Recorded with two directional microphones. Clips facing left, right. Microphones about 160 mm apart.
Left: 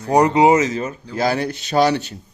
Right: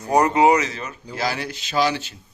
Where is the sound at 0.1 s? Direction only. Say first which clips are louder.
Left 3 dB; 15° left (ahead or behind).